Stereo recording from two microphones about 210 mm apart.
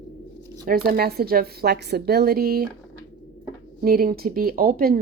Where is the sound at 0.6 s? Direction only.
45° right (ahead or behind).